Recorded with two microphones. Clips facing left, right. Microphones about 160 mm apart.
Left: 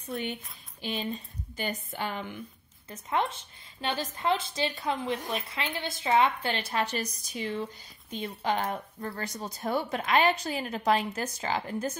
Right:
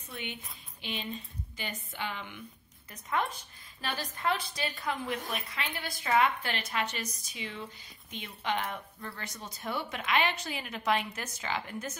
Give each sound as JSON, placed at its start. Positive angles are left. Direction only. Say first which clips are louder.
{"t": 0.8, "sound": "a woman's voice", "louder": "left 5 dB", "side_deg": 40}
{"t": 2.9, "sound": "a woman's voice", "louder": "left 3 dB", "side_deg": 25}